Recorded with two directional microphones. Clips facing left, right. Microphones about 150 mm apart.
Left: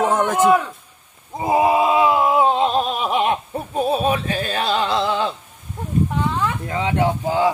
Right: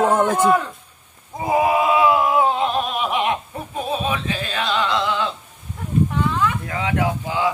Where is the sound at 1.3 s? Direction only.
25° left (ahead or behind).